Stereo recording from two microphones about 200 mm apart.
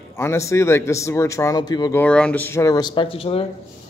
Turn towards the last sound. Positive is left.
turn(degrees=30)  # may be behind; listen again after turning